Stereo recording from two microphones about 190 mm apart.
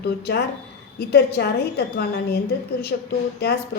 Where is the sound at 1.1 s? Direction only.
55° left (ahead or behind).